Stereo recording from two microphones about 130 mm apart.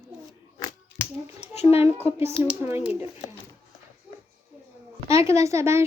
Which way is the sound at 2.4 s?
15° right (ahead or behind).